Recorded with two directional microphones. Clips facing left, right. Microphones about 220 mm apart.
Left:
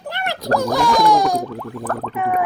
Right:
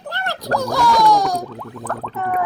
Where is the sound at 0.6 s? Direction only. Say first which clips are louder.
Right 1 dB; 15° left (ahead or behind).